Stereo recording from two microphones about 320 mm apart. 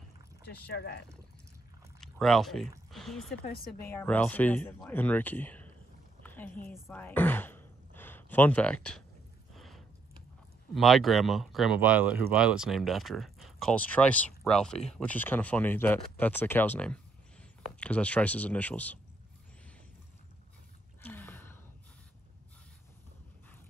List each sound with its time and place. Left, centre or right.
0.5 s speech: left
2.0 s speech: centre
6.2 s a sound: centre
6.7 s speech: centre
9.6 s a sound: centre
10.7 s speech: centre
21.0 s gasp: centre